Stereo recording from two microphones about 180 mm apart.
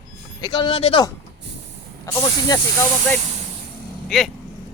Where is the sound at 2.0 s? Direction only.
15° left (ahead or behind).